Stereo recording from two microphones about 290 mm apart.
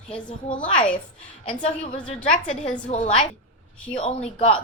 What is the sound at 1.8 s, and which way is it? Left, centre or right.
Speech, centre.